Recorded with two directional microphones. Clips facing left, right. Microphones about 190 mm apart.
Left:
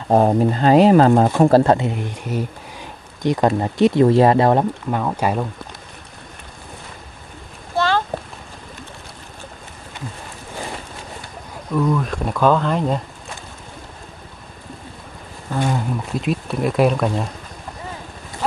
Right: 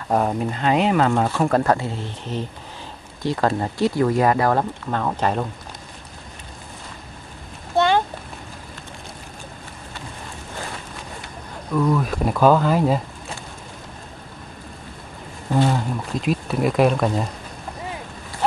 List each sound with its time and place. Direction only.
0.1 s speech: 35° left (ahead or behind)
4.9 s speech: 10° left (ahead or behind)
7.7 s a sound: 20° right (ahead or behind)
11.7 s speech: 5° right (ahead or behind)
15.7 s speech: centre (ahead or behind)